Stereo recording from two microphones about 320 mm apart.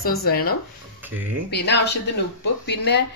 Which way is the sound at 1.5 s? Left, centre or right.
Left.